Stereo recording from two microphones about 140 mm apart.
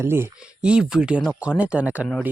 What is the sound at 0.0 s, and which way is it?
Speech, 15° right (ahead or behind).